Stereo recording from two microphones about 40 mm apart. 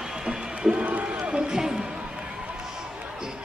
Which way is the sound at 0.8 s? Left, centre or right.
Right.